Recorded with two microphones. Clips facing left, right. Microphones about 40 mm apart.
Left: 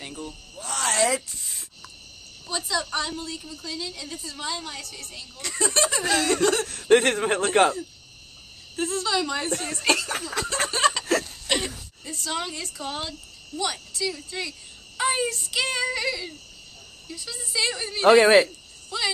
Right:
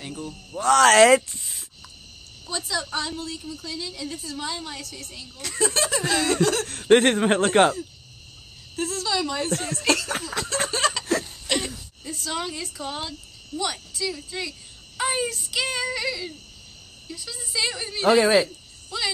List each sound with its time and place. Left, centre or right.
0.0 s speech: centre
0.3 s speech: right
1.4 s a sound: centre
2.4 s a woman's voice: centre
6.7 s speech: right
7.0 s a man's voice: right
8.7 s speech: centre
10.2 s a sound: centre
12.0 s a woman's voice: centre
18.0 s speech: centre
18.9 s a woman's voice: centre